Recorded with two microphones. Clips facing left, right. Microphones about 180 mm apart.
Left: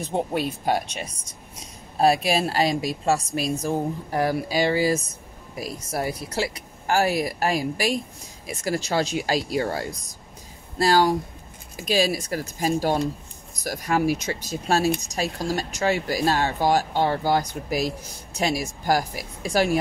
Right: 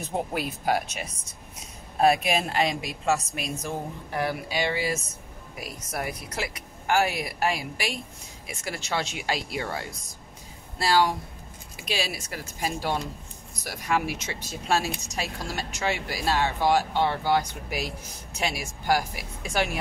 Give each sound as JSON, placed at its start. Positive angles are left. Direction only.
{"t": 0.3, "sound": "speech", "side_deg": 30}